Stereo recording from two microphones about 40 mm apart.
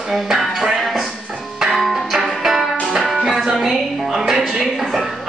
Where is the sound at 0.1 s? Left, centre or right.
Centre.